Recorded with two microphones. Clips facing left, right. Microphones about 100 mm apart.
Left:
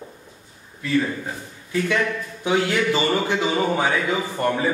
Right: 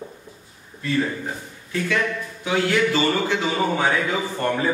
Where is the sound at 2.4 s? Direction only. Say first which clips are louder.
Even; 20° left (ahead or behind).